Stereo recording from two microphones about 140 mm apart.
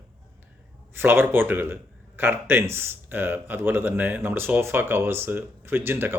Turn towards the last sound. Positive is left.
turn(degrees=-15)  # may be behind; listen again after turning